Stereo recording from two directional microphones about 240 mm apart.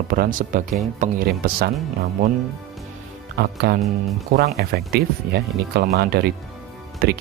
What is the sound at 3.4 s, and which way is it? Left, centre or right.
Speech, right.